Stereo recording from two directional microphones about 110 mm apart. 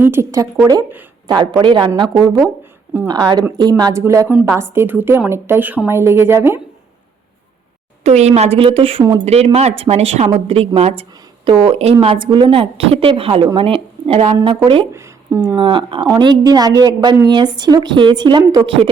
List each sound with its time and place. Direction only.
0.0 s a woman's voice: 25° right (ahead or behind)
1.3 s a woman's voice: 40° right (ahead or behind)
3.1 s a woman's voice: 40° right (ahead or behind); by 6.6 s 20° right (ahead or behind)
8.0 s speech: 80° right
8.5 s a woman's voice: 55° right (ahead or behind)
9.2 s speech: 70° right (ahead or behind)
10.2 s a woman's voice: 60° right (ahead or behind)
10.8 s speech: 80° right
11.4 s a woman's voice: 55° right (ahead or behind)
11.9 s a woman's voice: 50° right (ahead or behind)
14.4 s a woman's voice: 50° right (ahead or behind)
14.9 s a sound: 25° right (ahead or behind)
15.5 s a woman's voice: 45° right (ahead or behind)